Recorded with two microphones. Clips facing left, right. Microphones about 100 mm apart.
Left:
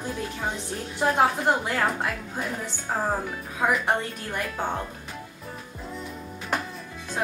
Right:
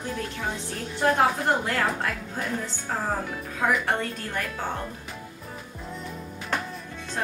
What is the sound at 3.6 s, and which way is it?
Speech, 15° left (ahead or behind).